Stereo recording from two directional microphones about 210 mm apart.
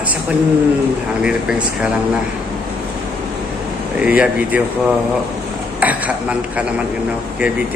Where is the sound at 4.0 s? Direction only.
5° right (ahead or behind).